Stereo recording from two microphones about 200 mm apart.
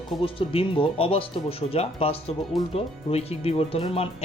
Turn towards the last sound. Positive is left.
turn(degrees=30)  # may be behind; listen again after turning